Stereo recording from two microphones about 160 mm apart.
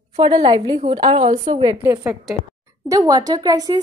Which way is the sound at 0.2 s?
30° right (ahead or behind).